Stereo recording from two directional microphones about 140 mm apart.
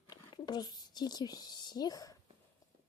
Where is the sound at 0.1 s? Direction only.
30° left (ahead or behind).